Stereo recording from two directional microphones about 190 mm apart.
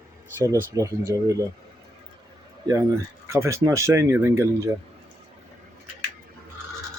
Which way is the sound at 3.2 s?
15° right (ahead or behind).